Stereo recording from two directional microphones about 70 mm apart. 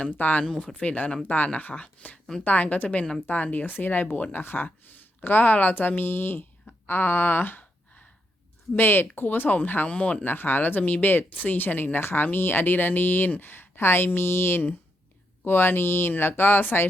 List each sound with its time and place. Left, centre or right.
0.0 s speech: left
6.8 s a sound: left
8.7 s speech: left